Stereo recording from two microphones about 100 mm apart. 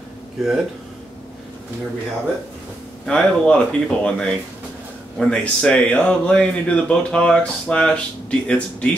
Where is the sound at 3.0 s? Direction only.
10° left (ahead or behind).